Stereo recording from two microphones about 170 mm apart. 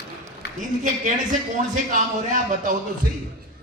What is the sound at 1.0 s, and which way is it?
A man's voice, 50° right (ahead or behind).